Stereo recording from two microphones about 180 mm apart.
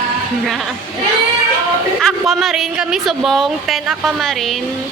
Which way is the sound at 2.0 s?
Centre (ahead or behind).